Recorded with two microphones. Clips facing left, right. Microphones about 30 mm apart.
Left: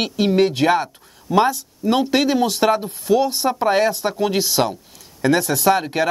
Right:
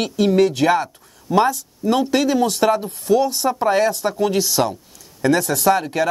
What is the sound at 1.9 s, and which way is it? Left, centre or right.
A man's voice, left.